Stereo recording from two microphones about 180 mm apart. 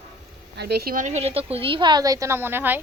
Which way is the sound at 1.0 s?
35° right (ahead or behind).